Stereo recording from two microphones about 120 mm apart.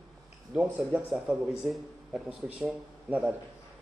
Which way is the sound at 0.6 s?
10° right (ahead or behind).